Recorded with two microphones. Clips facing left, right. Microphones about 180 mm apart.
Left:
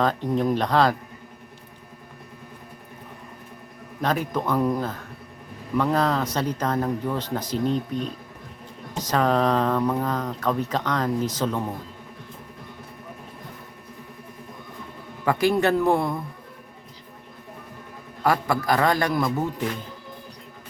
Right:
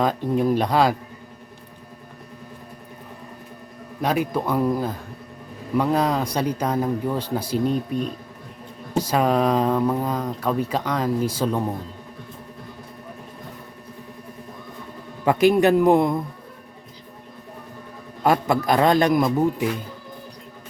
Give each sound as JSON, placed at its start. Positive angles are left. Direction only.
{"t": 0.0, "sound": "speech", "side_deg": -10}
{"t": 4.0, "sound": "speech", "side_deg": -10}
{"t": 15.2, "sound": "a man's voice", "side_deg": -20}
{"t": 18.2, "sound": "a man's voice", "side_deg": -20}